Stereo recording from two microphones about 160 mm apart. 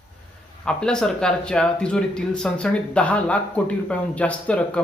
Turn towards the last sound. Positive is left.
turn(degrees=5)  # may be behind; listen again after turning